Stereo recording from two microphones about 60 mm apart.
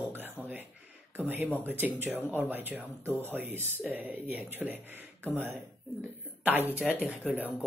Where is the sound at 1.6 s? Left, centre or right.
Right.